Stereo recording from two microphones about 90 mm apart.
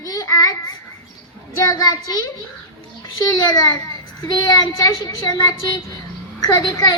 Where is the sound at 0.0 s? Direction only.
45° left (ahead or behind).